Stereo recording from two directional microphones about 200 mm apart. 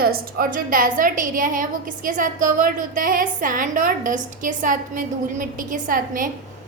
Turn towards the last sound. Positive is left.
turn(degrees=-45)  # may be behind; listen again after turning